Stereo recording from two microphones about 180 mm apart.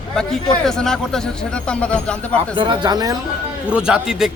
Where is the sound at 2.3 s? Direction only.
25° right (ahead or behind).